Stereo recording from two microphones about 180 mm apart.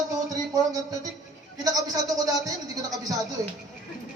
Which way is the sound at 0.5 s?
20° right (ahead or behind).